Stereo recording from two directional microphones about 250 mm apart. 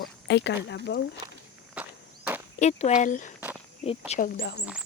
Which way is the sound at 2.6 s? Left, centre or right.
Left.